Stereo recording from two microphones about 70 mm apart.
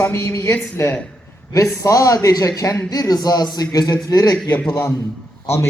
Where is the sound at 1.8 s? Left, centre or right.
Left.